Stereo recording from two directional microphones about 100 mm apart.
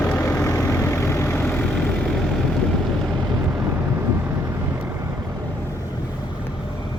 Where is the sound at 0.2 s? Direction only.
30° left (ahead or behind).